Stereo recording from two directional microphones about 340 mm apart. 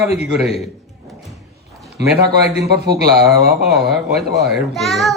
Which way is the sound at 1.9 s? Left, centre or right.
Right.